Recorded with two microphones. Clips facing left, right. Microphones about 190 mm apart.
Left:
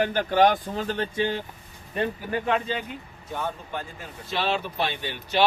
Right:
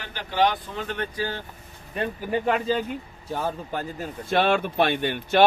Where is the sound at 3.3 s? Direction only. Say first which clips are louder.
Right 3 dB; 35° right (ahead or behind).